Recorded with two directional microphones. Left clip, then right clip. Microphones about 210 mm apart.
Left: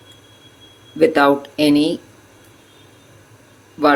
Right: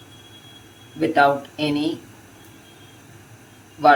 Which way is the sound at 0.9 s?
45° left (ahead or behind).